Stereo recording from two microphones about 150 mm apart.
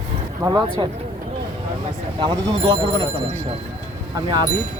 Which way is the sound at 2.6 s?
40° right (ahead or behind).